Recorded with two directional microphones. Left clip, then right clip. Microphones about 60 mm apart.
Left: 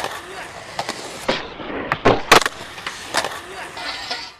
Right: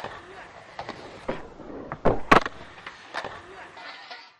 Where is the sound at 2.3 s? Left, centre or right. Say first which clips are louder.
Left 6 dB; centre.